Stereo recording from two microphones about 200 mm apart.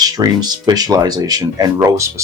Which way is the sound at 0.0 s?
20° right (ahead or behind).